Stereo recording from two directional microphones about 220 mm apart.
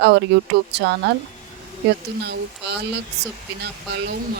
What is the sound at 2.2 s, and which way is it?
Speech, 50° right (ahead or behind).